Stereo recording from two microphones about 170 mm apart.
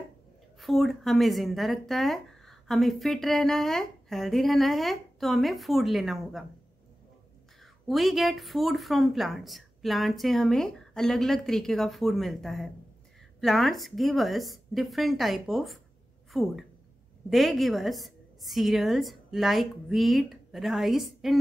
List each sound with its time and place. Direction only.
0.6 s speech: centre (ahead or behind)
7.6 s a woman's voice: centre (ahead or behind)